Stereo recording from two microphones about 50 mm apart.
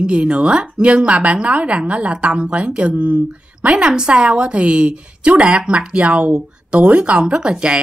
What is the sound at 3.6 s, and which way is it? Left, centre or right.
A woman's voice, right.